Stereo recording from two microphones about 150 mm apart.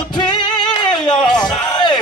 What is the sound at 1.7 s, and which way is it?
Music, 30° left (ahead or behind).